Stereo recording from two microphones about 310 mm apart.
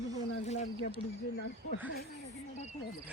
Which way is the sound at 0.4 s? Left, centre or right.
Left.